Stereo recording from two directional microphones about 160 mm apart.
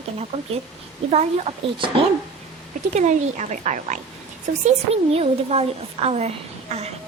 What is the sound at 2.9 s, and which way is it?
A woman's voice, 45° right (ahead or behind).